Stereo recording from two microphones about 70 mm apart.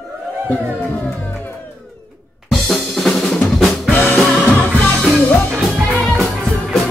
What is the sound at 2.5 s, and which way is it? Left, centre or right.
Drum kit, centre.